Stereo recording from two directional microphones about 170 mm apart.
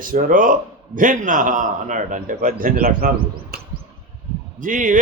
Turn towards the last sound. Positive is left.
turn(degrees=-50)  # may be behind; listen again after turning